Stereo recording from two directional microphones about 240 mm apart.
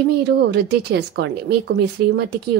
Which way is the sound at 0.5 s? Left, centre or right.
Right.